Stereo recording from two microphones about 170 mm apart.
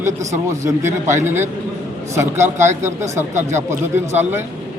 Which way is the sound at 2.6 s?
15° right (ahead or behind).